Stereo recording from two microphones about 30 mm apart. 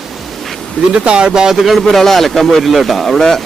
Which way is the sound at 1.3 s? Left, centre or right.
Right.